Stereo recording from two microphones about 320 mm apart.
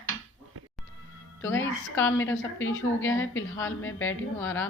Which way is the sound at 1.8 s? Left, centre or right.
Centre.